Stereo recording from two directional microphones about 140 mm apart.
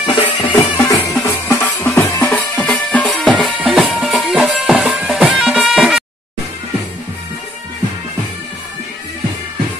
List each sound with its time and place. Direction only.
0.0 s music: 35° left (ahead or behind)
0.5 s music: 20° left (ahead or behind); by 6.0 s centre (ahead or behind)